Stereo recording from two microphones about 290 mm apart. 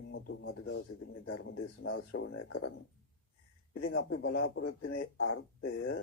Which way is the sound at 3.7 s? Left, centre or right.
Left.